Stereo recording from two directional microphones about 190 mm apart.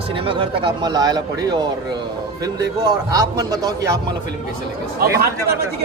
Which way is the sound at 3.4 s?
20° right (ahead or behind).